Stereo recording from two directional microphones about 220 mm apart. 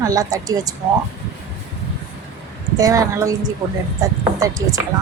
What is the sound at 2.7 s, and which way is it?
Speech, 15° right (ahead or behind).